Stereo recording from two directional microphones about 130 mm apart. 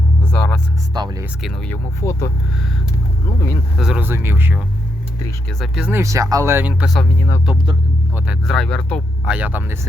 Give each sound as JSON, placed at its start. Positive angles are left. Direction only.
{"t": 0.3, "sound": "a sound", "side_deg": 10}
{"t": 0.9, "sound": "music", "side_deg": -30}
{"t": 1.4, "sound": "speech", "side_deg": 0}
{"t": 1.7, "sound": "speech", "side_deg": 20}
{"t": 3.8, "sound": "speech", "side_deg": -5}
{"t": 4.0, "sound": "speech", "side_deg": -15}
{"t": 5.5, "sound": "speech", "side_deg": -5}
{"t": 5.9, "sound": "speech", "side_deg": -20}
{"t": 7.0, "sound": "speech", "side_deg": 20}
{"t": 8.1, "sound": "speech", "side_deg": -5}
{"t": 8.5, "sound": "speech", "side_deg": 5}
{"t": 9.2, "sound": "speech", "side_deg": -10}